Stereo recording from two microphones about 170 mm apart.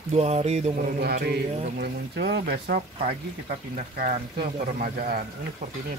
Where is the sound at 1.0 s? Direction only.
70° right (ahead or behind).